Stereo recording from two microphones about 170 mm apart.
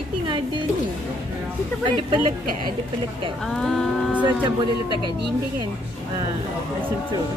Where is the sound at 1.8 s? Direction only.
30° right (ahead or behind).